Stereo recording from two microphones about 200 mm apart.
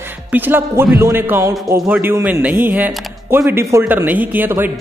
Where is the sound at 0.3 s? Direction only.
10° right (ahead or behind).